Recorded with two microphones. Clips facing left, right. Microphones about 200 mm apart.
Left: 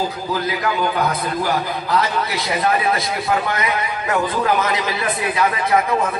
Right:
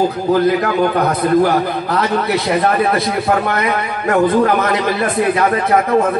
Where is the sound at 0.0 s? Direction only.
55° right (ahead or behind).